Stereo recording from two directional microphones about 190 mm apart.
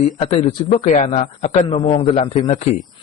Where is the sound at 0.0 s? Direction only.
35° left (ahead or behind).